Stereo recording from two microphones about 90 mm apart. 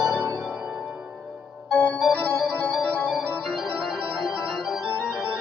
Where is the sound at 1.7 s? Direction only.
15° left (ahead or behind).